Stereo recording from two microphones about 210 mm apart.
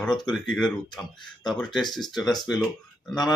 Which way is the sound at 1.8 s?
20° left (ahead or behind).